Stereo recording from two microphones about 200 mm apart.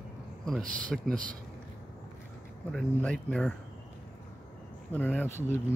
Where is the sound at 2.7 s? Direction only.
5° left (ahead or behind).